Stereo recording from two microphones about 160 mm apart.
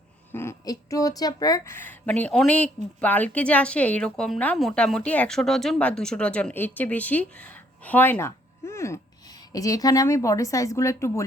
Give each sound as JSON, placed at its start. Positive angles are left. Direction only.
{"t": 0.3, "sound": "a woman's voice", "side_deg": 15}